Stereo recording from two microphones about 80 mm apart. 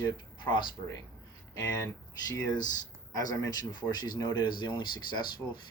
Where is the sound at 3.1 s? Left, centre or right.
Left.